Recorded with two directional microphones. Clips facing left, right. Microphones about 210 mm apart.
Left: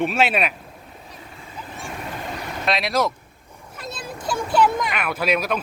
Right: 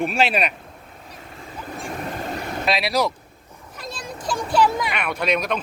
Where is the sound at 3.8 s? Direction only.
5° left (ahead or behind).